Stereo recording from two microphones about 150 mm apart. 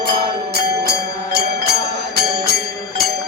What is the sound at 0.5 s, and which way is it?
Music, 90° right.